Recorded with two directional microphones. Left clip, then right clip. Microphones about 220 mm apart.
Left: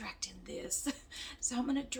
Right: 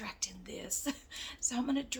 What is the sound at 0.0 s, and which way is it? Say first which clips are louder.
A woman's voice: right 2 dB; 30° right (ahead or behind).